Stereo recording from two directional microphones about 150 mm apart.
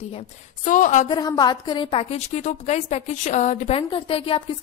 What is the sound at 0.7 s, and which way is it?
Speech, 55° left (ahead or behind).